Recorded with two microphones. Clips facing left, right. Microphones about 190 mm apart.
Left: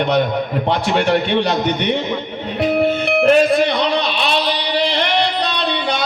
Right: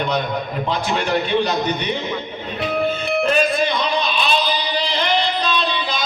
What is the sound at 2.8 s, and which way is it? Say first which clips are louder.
Music: left 5 dB; 70° left (ahead or behind).